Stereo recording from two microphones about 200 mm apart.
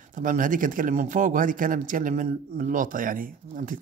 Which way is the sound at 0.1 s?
40° right (ahead or behind).